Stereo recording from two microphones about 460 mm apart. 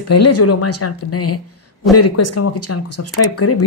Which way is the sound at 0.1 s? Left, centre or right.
Left.